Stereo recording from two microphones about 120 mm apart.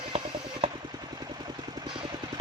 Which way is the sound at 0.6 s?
55° right (ahead or behind).